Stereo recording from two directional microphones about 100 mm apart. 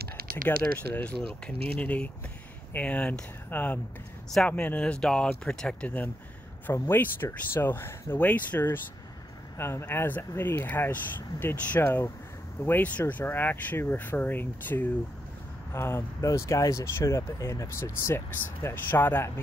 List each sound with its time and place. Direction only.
0.5 s speech: 15° left (ahead or behind)
1.2 s speech: 65° right (ahead or behind)
1.8 s speech: 15° left (ahead or behind)